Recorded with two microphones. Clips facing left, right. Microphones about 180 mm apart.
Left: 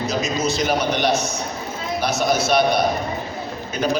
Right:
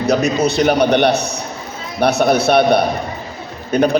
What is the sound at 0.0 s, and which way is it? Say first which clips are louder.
A man's voice: right 7 dB; 65° right (ahead or behind).